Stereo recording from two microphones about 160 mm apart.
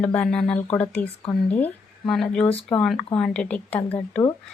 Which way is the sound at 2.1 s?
5° left (ahead or behind).